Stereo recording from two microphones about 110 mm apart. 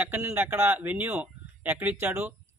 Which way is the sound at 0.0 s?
20° right (ahead or behind).